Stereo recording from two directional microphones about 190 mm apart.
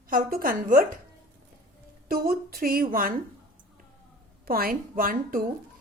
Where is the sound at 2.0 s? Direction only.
50° right (ahead or behind).